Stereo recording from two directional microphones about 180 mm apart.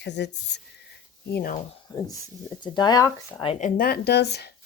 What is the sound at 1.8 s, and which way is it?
Speech, 20° left (ahead or behind).